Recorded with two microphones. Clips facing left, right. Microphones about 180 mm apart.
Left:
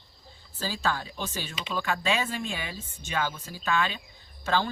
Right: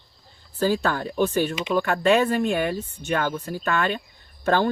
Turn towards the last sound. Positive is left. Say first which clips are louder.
# right 6 dB
turn(degrees=-55)  # may be behind; listen again after turning